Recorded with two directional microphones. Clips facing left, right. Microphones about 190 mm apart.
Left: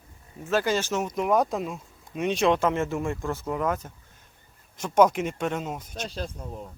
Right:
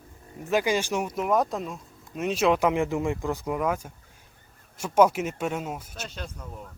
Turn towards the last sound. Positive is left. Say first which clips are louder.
# left 4 dB
turn(degrees=30)  # may be behind; listen again after turning